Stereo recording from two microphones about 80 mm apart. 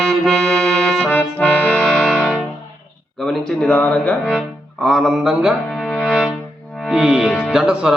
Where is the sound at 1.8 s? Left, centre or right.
Centre.